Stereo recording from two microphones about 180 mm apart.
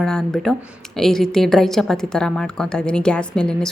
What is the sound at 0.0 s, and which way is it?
A woman's voice, 5° left (ahead or behind).